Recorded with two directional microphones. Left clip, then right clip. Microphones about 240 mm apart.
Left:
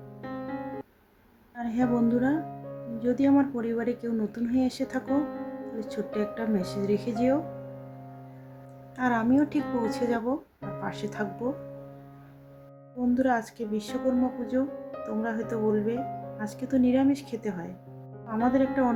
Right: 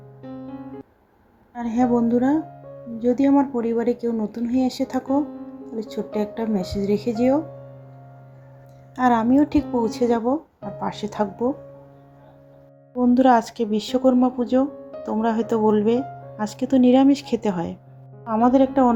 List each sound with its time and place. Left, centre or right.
1.5 s speech: centre
9.0 s speech: centre
13.0 s speech: centre